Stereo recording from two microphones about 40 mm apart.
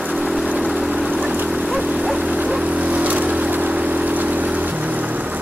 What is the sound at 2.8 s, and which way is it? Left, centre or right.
Vehicle, right.